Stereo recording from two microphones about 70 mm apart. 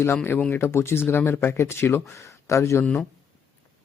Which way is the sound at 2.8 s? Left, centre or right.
Centre.